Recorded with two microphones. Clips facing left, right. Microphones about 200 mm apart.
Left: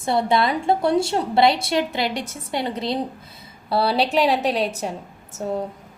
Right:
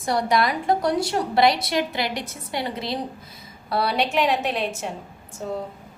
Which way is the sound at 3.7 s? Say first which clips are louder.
Left 3 dB; 30° left (ahead or behind).